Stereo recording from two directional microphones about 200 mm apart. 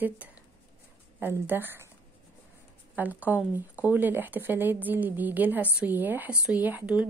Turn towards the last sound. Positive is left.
turn(degrees=-5)  # may be behind; listen again after turning